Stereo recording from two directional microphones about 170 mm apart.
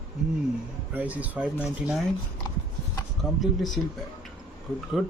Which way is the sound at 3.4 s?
Centre (ahead or behind).